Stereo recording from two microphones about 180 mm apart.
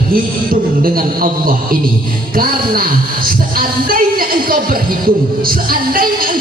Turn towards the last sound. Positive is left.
turn(degrees=-50)  # may be behind; listen again after turning